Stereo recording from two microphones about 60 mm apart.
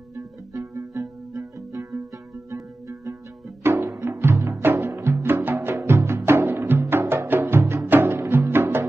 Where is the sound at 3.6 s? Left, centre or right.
Right.